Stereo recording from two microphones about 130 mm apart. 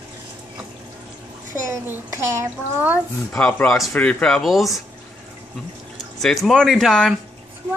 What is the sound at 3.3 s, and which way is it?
Speech, 10° left (ahead or behind).